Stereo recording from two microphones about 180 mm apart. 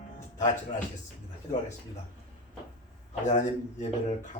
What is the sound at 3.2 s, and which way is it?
Speech, 45° left (ahead or behind).